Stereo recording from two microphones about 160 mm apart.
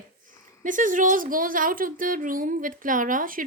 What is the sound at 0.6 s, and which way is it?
A woman's voice, 55° right (ahead or behind).